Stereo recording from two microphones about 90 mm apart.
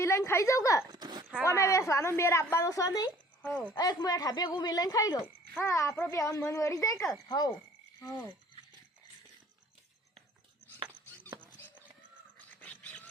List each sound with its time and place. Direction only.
0.0 s speech: 30° left (ahead or behind)
0.9 s a sound: 50° right (ahead or behind)
1.5 s speech: 35° left (ahead or behind)
3.4 s speech: 15° left (ahead or behind)
3.8 s speech: 45° left (ahead or behind)
5.2 s speech: 30° left (ahead or behind)
7.3 s speech: 45° left (ahead or behind)
12.5 s wild animals: 15° left (ahead or behind)